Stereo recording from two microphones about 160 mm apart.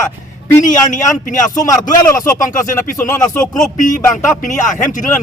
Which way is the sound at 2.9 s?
15° left (ahead or behind).